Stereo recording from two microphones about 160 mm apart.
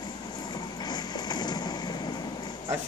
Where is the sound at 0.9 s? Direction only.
25° left (ahead or behind).